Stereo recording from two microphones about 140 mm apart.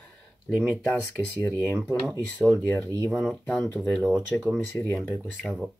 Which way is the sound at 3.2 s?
10° left (ahead or behind).